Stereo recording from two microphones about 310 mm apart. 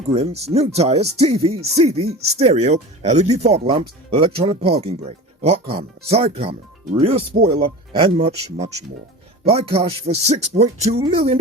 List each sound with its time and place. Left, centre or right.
0.1 s speech: centre
7.6 s speech: centre